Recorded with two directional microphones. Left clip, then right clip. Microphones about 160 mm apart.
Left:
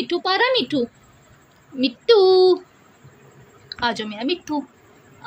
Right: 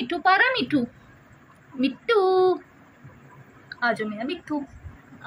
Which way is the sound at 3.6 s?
65° left (ahead or behind).